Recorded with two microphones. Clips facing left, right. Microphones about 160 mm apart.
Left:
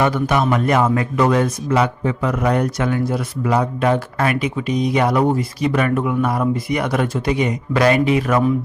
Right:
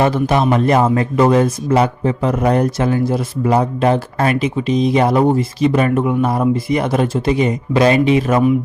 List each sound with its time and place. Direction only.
0.0 s a man's voice: 30° right (ahead or behind)